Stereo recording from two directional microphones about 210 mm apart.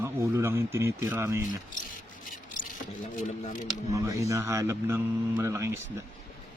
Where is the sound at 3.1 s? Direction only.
40° left (ahead or behind).